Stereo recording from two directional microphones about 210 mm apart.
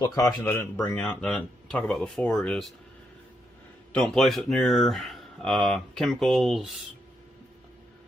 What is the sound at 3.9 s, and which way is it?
Speech, centre (ahead or behind).